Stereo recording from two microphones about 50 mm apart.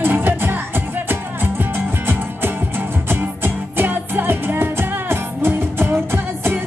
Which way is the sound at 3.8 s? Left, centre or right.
Right.